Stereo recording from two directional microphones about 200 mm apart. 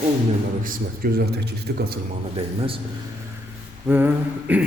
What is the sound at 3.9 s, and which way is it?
Speech, 10° right (ahead or behind).